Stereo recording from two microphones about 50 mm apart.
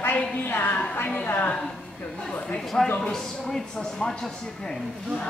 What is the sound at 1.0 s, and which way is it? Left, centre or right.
Speech, left.